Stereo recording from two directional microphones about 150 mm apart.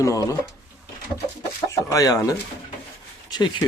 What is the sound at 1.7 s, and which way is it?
Chicken, 20° left (ahead or behind).